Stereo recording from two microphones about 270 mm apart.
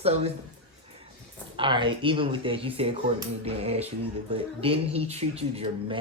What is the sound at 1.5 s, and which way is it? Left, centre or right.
Speech, centre.